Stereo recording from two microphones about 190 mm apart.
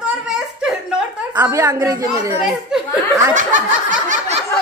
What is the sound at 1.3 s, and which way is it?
A woman's voice, 15° right (ahead or behind).